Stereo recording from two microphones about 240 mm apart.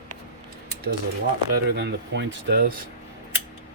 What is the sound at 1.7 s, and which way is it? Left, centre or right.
Speech, right.